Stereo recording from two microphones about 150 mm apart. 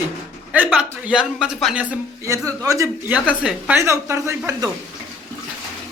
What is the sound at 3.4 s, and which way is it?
Speech, 10° right (ahead or behind).